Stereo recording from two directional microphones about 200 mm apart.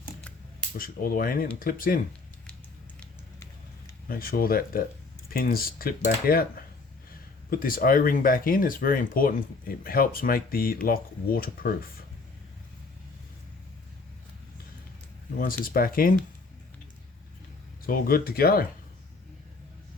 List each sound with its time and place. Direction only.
0.8 s speech: 45° left (ahead or behind)
3.0 s a sound: 15° left (ahead or behind)
4.1 s speech: 45° left (ahead or behind)
7.5 s speech: 45° left (ahead or behind)
15.4 s speech: 45° left (ahead or behind)
17.8 s speech: 45° left (ahead or behind)